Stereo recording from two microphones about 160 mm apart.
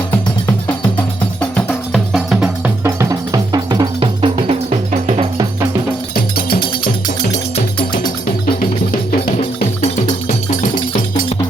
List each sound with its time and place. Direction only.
1.4 s music: 5° left (ahead or behind)
2.8 s music: 20° right (ahead or behind); by 5.5 s 40° right (ahead or behind)
6.3 s music: 70° left (ahead or behind); by 7.6 s 50° left (ahead or behind)
9.2 s music: 40° left (ahead or behind)